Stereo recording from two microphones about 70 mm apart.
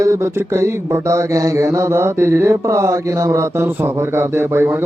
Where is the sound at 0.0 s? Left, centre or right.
Right.